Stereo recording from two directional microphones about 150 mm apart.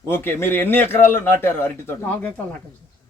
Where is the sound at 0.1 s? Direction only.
15° left (ahead or behind).